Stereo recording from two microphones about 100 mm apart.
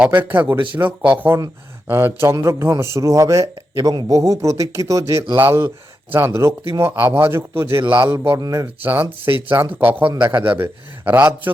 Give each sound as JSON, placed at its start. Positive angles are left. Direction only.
{"t": 0.0, "sound": "speech", "side_deg": -15}
{"t": 1.9, "sound": "a man's voice", "side_deg": -20}
{"t": 8.4, "sound": "a man's voice", "side_deg": -35}
{"t": 8.6, "sound": "a man's voice", "side_deg": -20}